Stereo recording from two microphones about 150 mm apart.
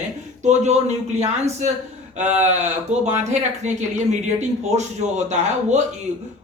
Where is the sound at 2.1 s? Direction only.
50° right (ahead or behind).